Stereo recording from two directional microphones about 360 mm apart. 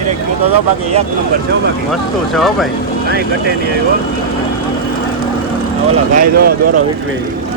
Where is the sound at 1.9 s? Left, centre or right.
Centre.